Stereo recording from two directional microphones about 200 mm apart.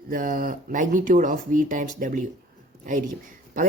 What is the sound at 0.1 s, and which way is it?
Speech, 45° right (ahead or behind).